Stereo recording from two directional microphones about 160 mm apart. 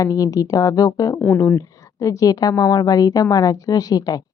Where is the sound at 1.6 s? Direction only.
20° left (ahead or behind).